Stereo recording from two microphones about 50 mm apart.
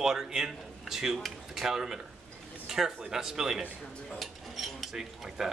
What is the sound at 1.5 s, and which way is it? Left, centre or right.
Speech, centre.